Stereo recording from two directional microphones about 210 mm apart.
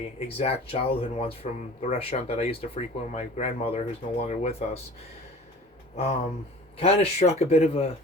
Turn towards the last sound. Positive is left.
turn(degrees=30)  # may be behind; listen again after turning